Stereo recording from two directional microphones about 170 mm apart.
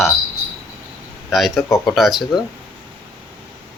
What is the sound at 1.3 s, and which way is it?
Speech, centre (ahead or behind).